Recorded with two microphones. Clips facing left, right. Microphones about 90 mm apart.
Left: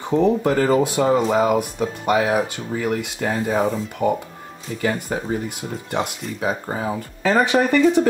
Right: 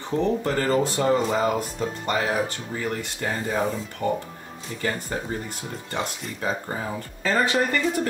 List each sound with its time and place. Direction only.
0.0 s speech: 15° left (ahead or behind)